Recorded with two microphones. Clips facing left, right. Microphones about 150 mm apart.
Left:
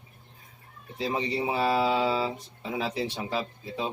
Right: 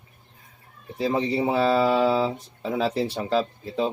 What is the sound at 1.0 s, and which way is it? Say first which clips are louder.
A man's voice: right 5 dB; 60° right (ahead or behind).